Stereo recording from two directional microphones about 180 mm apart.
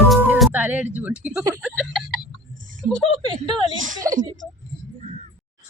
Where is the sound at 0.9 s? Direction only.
5° right (ahead or behind).